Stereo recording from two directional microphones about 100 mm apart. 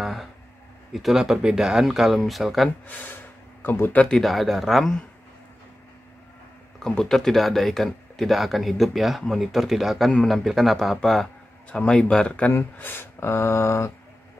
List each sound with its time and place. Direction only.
0.0 s speech: centre (ahead or behind)
2.9 s speech: 15° left (ahead or behind); by 4.9 s centre (ahead or behind)
6.8 s speech: 5° left (ahead or behind)
12.5 s speech: 20° left (ahead or behind)